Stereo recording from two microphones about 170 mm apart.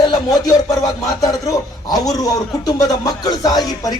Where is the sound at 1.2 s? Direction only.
20° left (ahead or behind).